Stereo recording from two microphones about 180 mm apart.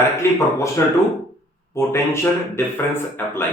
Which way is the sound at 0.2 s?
15° left (ahead or behind).